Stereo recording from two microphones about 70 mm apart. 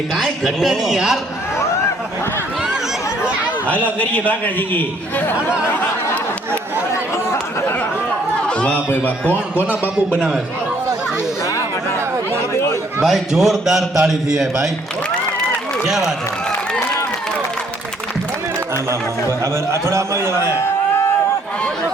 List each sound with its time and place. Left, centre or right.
0.1 s speech: centre
3.7 s a man's voice: centre
6.9 s chatter: left
8.4 s a sound: centre
8.9 s a man's voice: left
9.6 s a man's voice: right
13.0 s speech: centre
15.8 s a man's voice: centre
19.7 s a man's voice: right